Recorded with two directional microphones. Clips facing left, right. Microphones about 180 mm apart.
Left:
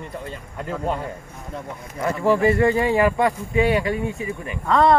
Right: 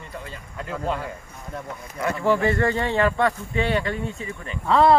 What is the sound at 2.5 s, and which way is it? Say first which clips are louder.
Speech: left 4 dB; 15° left (ahead or behind).